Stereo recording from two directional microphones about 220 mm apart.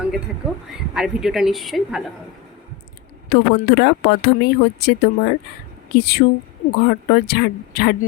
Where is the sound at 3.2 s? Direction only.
50° left (ahead or behind).